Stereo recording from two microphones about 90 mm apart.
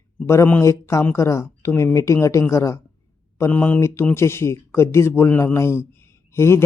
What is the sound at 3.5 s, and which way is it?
A man's voice, 20° left (ahead or behind).